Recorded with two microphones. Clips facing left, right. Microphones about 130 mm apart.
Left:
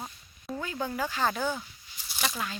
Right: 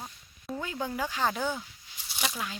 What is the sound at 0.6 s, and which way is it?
Speech, 20° right (ahead or behind).